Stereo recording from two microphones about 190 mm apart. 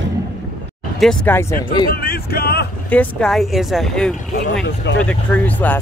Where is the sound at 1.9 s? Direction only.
55° left (ahead or behind).